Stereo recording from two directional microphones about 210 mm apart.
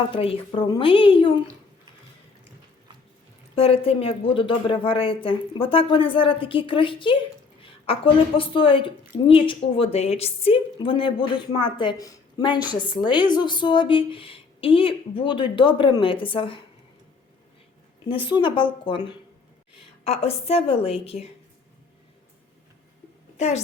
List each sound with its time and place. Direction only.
0.1 s a woman's voice: 25° left (ahead or behind)
3.5 s a woman's voice: 25° left (ahead or behind)
18.1 s a woman's voice: 20° left (ahead or behind)